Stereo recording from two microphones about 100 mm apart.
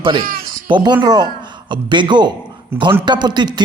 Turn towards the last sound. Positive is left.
turn(degrees=-45)  # may be behind; listen again after turning